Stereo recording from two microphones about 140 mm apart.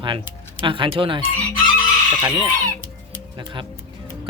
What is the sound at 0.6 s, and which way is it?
Speech, 35° right (ahead or behind).